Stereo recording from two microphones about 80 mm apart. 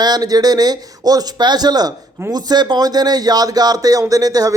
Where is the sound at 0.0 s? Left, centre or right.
Right.